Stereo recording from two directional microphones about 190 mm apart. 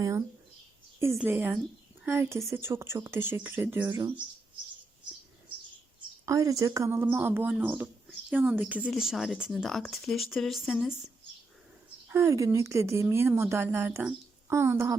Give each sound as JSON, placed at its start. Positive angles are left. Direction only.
{"t": 0.0, "sound": "a woman's voice", "side_deg": -15}
{"t": 6.2, "sound": "a woman's voice", "side_deg": -15}
{"t": 12.0, "sound": "a woman's voice", "side_deg": -15}